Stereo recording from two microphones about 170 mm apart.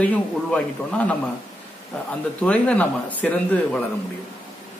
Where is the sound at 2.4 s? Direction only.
10° left (ahead or behind).